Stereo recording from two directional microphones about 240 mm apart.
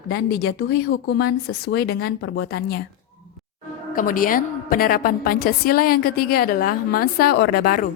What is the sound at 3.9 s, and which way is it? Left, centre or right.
A woman's voice, left.